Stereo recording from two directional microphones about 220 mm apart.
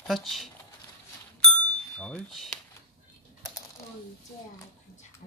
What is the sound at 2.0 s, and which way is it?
Speech, 5° left (ahead or behind).